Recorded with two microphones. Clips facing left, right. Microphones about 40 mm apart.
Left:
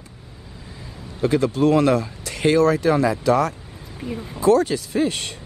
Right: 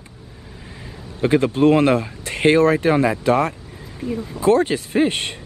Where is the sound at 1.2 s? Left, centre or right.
Right.